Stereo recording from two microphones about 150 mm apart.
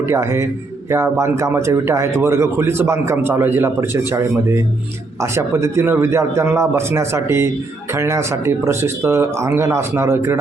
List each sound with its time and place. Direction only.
0.1 s a man's voice: 20° right (ahead or behind)